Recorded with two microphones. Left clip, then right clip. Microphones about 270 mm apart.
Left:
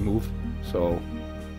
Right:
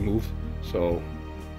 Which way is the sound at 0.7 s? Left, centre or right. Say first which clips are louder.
Even; centre.